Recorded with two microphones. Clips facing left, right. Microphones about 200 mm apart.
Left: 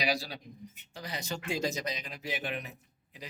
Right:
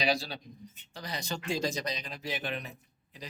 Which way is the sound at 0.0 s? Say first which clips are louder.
Right 2 dB; 25° right (ahead or behind).